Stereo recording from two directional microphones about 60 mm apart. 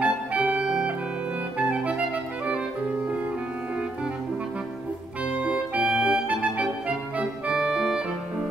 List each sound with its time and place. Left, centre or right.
0.0 s music: right
1.6 s clarinet: right
5.4 s music: centre